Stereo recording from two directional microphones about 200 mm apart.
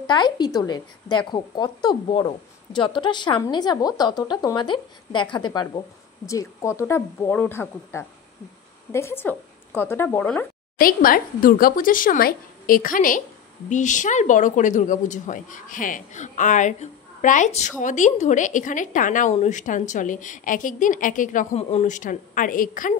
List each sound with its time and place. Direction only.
0.0 s speech: 20° left (ahead or behind)
10.8 s speech: 45° left (ahead or behind)